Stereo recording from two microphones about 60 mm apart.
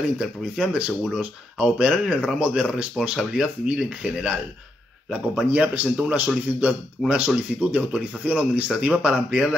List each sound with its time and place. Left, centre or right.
0.2 s speech: centre